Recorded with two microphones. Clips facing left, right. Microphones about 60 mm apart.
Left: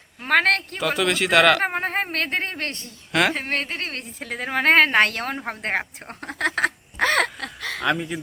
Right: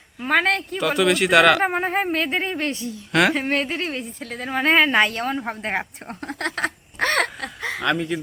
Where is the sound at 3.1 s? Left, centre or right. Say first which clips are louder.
Right 2 dB; centre.